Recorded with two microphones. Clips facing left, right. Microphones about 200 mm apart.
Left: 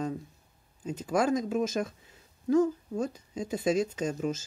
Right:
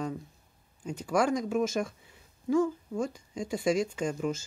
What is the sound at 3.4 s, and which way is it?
Speech, 20° left (ahead or behind).